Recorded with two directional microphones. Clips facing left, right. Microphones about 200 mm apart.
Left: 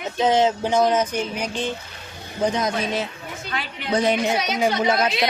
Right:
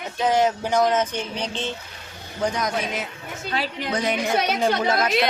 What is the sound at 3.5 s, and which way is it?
Speech, 35° right (ahead or behind).